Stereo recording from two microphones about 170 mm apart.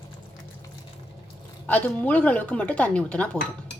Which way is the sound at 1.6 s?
10° left (ahead or behind).